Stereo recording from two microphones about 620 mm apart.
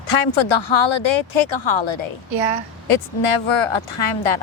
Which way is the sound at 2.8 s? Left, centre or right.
Left.